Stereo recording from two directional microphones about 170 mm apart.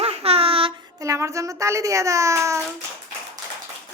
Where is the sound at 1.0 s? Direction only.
20° right (ahead or behind).